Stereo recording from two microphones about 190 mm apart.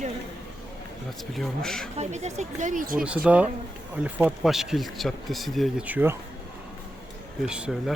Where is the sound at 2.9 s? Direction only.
5° right (ahead or behind).